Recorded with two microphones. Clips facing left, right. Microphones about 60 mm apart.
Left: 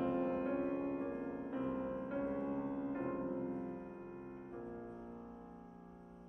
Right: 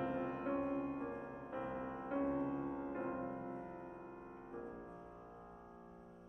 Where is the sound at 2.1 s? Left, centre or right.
Centre.